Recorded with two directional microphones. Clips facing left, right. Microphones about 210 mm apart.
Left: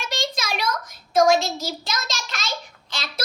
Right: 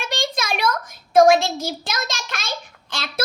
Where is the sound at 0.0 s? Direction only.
55° right (ahead or behind).